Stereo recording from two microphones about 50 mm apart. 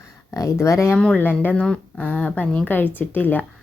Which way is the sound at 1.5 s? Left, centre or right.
Centre.